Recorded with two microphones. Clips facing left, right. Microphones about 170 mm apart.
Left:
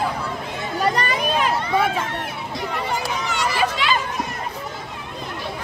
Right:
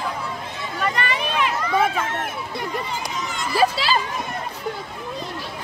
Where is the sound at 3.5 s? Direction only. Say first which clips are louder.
Right 5 dB; 35° right (ahead or behind).